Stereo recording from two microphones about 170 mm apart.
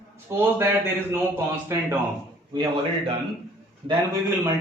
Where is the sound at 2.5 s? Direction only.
25° right (ahead or behind).